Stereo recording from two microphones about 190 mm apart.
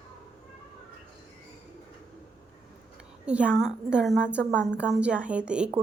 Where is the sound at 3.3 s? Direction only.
5° right (ahead or behind).